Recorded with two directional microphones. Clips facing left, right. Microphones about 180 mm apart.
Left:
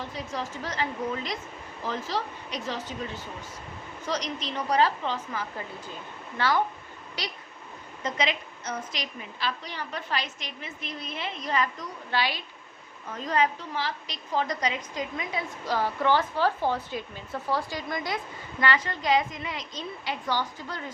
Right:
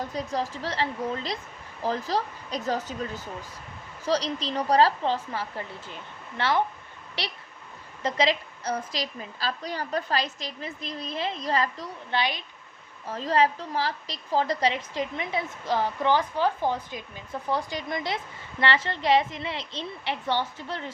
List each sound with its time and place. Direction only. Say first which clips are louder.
0.0 s a woman's voice: right 4 dB; 40° right (ahead or behind)
4.0 s a woman's voice: right 5 dB; 35° right (ahead or behind)
8.0 s a woman's voice: right 4 dB; 35° right (ahead or behind)
12.1 s a woman's voice: right 1 dB; 20° right (ahead or behind)
13.1 s a woman's voice: right 3 dB; 30° right (ahead or behind)